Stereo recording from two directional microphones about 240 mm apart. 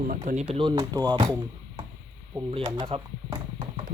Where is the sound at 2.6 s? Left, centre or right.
Right.